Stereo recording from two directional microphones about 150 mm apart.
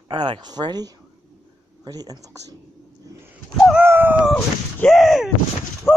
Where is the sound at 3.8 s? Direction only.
15° right (ahead or behind).